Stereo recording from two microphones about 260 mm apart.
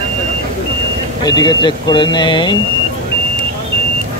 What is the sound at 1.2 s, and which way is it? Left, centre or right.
Speech, centre.